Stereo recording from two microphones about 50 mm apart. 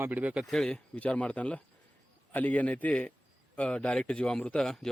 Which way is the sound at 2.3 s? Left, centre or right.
Left.